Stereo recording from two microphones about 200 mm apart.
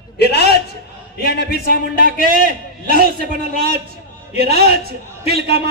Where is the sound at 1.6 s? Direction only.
45° right (ahead or behind).